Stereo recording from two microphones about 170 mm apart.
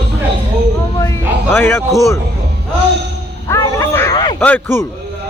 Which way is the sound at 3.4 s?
15° left (ahead or behind).